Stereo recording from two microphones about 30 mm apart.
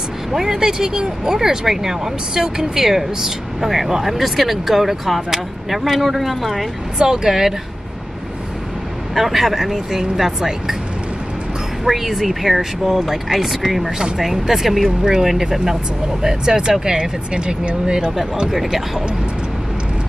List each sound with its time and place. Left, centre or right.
0.3 s speech: centre
7.2 s speech: centre
9.1 s speech: centre
11.8 s speech: centre
15.5 s speech: centre
18.5 s speech: centre